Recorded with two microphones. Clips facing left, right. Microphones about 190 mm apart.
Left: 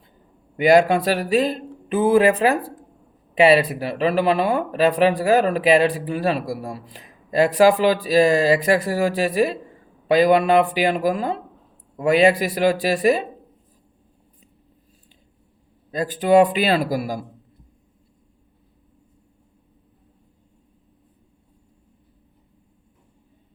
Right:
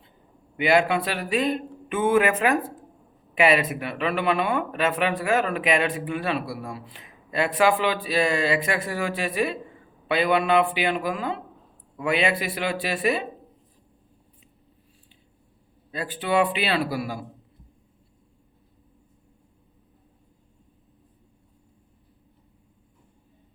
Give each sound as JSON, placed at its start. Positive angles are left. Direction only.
{"t": 0.5, "sound": "speech", "side_deg": 40}
{"t": 15.9, "sound": "speech", "side_deg": 40}